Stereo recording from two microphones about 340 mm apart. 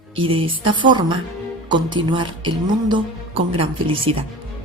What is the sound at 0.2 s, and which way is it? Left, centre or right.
Speech, centre.